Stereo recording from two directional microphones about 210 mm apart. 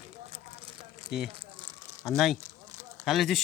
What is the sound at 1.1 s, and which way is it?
Speech, centre (ahead or behind).